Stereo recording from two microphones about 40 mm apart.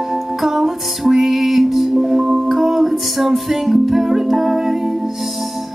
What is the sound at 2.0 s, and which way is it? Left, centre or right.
Music, centre.